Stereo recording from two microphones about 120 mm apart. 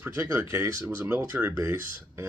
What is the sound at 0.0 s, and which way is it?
Speech, 25° right (ahead or behind).